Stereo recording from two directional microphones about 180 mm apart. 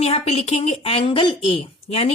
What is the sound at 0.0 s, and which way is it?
A woman's voice, 35° left (ahead or behind).